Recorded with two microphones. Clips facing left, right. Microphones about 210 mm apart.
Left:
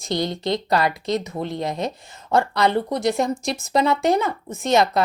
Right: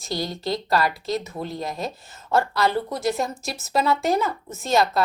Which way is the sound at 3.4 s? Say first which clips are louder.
Left 6 dB; 5° right (ahead or behind).